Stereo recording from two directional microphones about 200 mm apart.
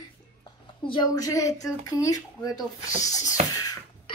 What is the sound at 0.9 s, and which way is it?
Speech, 20° left (ahead or behind).